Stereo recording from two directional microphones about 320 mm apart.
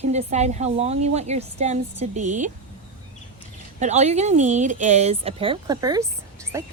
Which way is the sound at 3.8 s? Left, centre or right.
Right.